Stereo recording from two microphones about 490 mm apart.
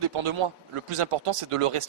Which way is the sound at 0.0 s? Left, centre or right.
Right.